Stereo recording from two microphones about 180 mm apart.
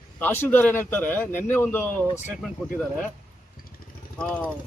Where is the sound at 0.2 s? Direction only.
10° left (ahead or behind).